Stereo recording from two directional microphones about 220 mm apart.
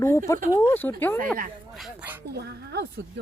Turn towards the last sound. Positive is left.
turn(degrees=-50)  # may be behind; listen again after turning